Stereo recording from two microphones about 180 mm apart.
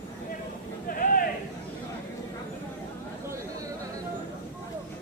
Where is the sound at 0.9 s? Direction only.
50° left (ahead or behind).